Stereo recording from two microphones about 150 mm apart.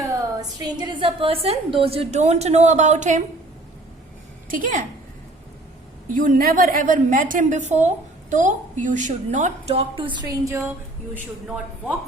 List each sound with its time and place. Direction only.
0.6 s a woman's voice: 30° right (ahead or behind); by 3.2 s 55° right (ahead or behind)
4.4 s a woman's voice: 65° right (ahead or behind)
6.1 s a woman's voice: 65° right (ahead or behind); by 10.6 s 20° right (ahead or behind)
11.1 s speech: 10° right (ahead or behind)